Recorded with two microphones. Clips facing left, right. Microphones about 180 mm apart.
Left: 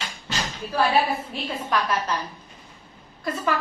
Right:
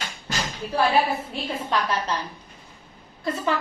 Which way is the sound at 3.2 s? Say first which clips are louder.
Right 1 dB; 25° right (ahead or behind).